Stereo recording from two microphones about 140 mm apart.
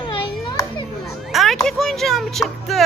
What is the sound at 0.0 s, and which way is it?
Children playing, 35° left (ahead or behind).